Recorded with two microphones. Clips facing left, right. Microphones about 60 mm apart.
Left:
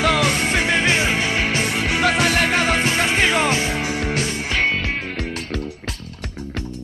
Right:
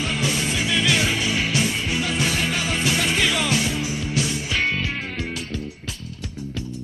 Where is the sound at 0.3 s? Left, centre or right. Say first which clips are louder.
Left 4 dB; left.